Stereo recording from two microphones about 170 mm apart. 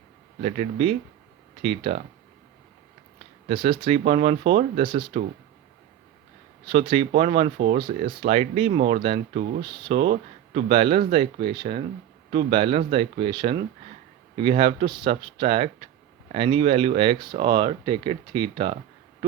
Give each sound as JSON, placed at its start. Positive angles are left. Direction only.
{"t": 0.4, "sound": "speech", "side_deg": -40}
{"t": 3.5, "sound": "speech", "side_deg": -30}
{"t": 6.7, "sound": "speech", "side_deg": -30}